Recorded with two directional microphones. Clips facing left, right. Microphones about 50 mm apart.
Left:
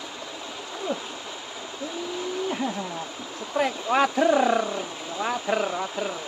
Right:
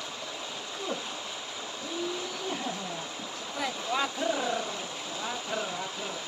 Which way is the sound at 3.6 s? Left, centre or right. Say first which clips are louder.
Left 9 dB; left.